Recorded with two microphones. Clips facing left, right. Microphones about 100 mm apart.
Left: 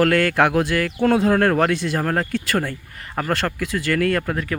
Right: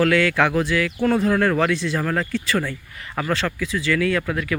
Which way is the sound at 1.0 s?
65° left (ahead or behind).